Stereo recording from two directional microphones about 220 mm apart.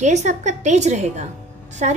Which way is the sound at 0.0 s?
30° right (ahead or behind).